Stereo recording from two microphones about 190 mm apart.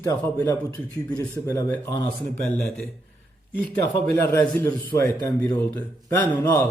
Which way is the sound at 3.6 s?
10° left (ahead or behind).